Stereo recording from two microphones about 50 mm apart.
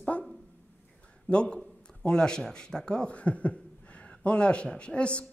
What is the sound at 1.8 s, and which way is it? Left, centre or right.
Speech, centre.